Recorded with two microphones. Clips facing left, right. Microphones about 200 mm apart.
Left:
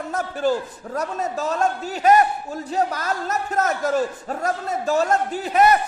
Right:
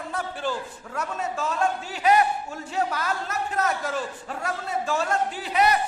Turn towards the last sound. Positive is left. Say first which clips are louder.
# left 5 dB
turn(degrees=50)  # may be behind; listen again after turning